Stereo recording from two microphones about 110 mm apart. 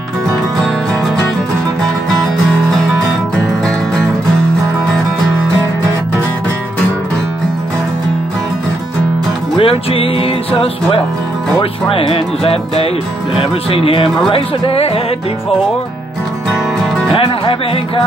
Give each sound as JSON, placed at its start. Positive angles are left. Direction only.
{"t": 9.6, "sound": "music", "side_deg": 55}
{"t": 17.1, "sound": "music", "side_deg": 55}